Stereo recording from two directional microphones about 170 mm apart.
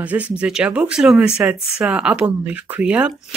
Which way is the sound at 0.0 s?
5° right (ahead or behind).